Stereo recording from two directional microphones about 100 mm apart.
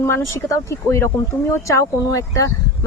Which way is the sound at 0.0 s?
30° left (ahead or behind).